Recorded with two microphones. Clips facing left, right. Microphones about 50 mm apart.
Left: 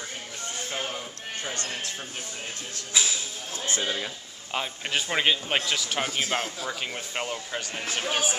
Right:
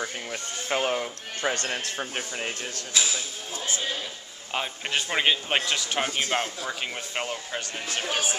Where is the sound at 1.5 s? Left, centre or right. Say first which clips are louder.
Right 4 dB; right.